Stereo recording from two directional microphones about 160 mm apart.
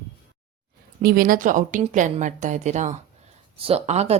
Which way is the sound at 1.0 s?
60° right (ahead or behind).